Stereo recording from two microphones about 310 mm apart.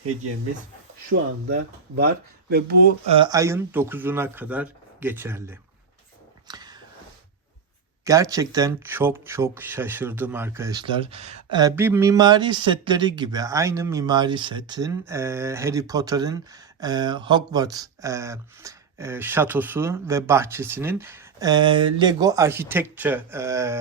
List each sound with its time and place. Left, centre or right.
1.1 s speech: right
2.5 s speech: right
3.2 s speech: centre
6.5 s a sound: centre
8.0 s speech: centre